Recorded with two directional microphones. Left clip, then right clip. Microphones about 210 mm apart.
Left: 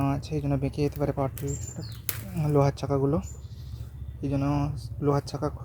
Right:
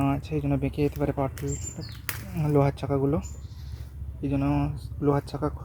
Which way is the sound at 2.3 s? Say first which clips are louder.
Even; centre (ahead or behind).